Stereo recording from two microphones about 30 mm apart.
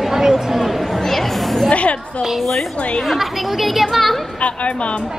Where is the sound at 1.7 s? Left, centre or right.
Left.